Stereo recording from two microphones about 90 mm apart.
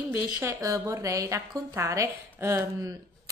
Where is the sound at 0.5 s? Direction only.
35° right (ahead or behind).